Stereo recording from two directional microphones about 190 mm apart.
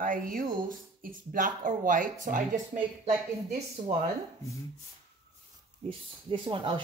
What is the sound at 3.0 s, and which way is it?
Speech, 35° right (ahead or behind).